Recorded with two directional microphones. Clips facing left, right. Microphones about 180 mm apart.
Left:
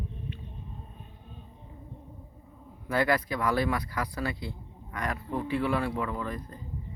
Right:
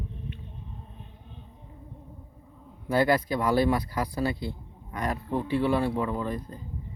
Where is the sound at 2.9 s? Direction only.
30° right (ahead or behind).